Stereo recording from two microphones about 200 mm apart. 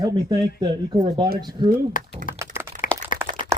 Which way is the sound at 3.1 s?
45° left (ahead or behind).